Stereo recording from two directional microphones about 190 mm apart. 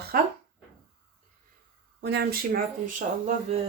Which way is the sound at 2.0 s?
65° right (ahead or behind).